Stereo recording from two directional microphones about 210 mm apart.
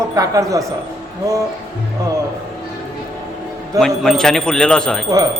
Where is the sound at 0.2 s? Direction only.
15° right (ahead or behind).